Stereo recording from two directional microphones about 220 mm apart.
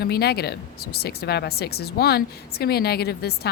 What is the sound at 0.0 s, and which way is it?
Speech, 45° left (ahead or behind).